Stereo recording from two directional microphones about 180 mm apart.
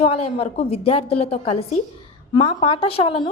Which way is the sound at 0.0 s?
35° left (ahead or behind).